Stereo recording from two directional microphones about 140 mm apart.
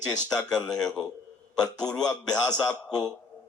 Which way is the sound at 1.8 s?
5° left (ahead or behind).